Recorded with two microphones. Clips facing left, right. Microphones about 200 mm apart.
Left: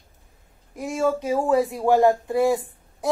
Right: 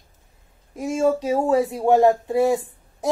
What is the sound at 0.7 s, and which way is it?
Speech, 20° right (ahead or behind).